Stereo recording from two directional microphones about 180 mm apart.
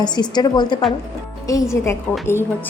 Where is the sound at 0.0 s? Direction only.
25° left (ahead or behind).